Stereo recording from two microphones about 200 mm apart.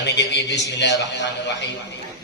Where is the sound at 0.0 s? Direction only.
60° left (ahead or behind).